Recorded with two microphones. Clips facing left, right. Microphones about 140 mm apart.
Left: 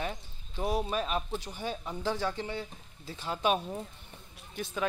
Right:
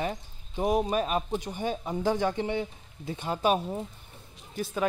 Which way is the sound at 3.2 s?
45° right (ahead or behind).